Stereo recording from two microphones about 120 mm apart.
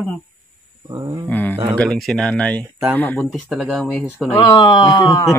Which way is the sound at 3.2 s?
Centre (ahead or behind).